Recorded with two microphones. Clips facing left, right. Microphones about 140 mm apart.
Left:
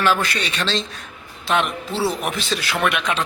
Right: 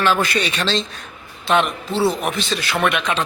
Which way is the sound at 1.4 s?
5° left (ahead or behind).